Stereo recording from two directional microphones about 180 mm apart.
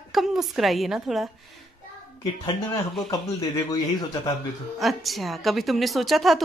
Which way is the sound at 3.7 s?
20° left (ahead or behind).